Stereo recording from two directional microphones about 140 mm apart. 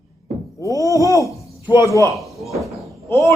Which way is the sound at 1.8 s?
20° left (ahead or behind).